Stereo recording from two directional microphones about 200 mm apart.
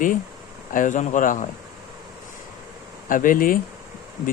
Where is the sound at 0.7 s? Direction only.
40° left (ahead or behind).